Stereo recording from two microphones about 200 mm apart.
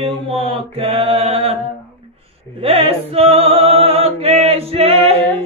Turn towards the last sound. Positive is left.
turn(degrees=-30)  # may be behind; listen again after turning